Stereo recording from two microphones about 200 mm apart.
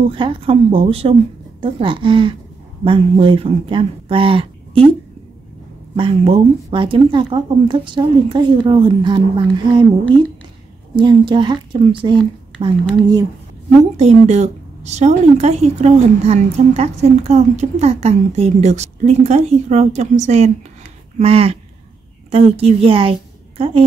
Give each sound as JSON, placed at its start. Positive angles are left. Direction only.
{"t": 0.1, "sound": "speech", "side_deg": -25}
{"t": 5.9, "sound": "speech", "side_deg": -25}